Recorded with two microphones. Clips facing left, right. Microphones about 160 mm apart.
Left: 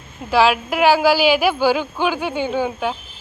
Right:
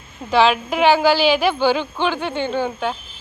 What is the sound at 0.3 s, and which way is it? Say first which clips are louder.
A woman's voice: even; 5° left (ahead or behind).